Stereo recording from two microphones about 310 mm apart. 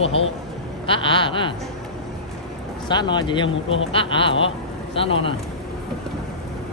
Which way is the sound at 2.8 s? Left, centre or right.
Centre.